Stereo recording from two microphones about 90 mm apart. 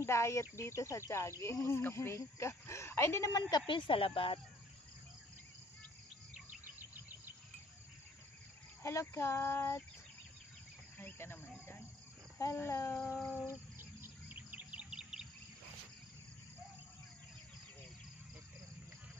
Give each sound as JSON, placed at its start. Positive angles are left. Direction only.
{"t": 0.0, "sound": "speech", "side_deg": 30}
{"t": 3.3, "sound": "speech", "side_deg": 50}
{"t": 6.8, "sound": "insect", "side_deg": -20}
{"t": 8.8, "sound": "speech", "side_deg": 35}
{"t": 11.0, "sound": "a sound", "side_deg": 25}
{"t": 12.5, "sound": "a sound", "side_deg": 30}
{"t": 13.7, "sound": "insect", "side_deg": -20}